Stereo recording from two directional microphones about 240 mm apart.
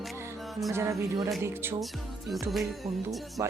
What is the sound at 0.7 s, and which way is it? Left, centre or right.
Speech, centre.